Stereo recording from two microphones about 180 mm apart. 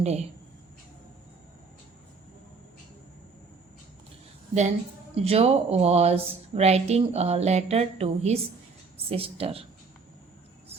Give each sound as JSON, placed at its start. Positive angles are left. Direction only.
{"t": 0.0, "sound": "speech", "side_deg": -40}
{"t": 5.1, "sound": "speech", "side_deg": -35}